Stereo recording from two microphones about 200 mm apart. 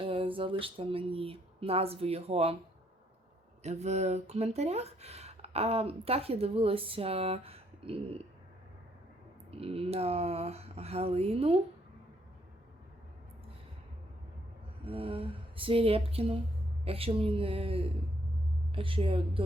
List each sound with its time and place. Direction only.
0.0 s speech: 25° right (ahead or behind)
3.6 s speech: 35° right (ahead or behind)
9.5 s speech: 30° right (ahead or behind)
14.8 s speech: 30° right (ahead or behind)